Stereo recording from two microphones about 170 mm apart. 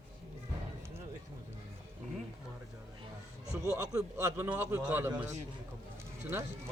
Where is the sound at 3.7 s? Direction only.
15° right (ahead or behind).